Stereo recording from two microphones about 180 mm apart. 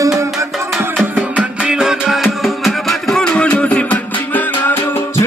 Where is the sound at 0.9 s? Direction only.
5° right (ahead or behind).